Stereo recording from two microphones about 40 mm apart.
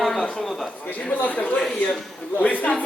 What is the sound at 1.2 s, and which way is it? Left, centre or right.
Speech, left.